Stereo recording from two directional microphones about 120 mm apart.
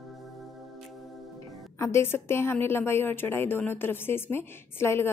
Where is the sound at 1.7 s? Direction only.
25° left (ahead or behind).